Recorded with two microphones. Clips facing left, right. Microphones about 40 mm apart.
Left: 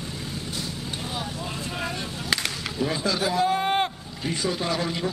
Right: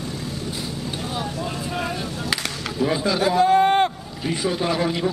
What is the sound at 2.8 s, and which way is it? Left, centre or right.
A man's voice, centre.